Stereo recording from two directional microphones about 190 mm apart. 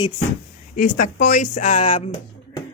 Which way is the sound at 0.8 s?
45° left (ahead or behind).